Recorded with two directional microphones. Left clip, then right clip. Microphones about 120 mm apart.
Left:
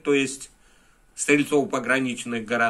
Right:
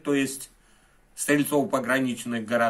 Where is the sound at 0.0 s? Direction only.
45° right (ahead or behind).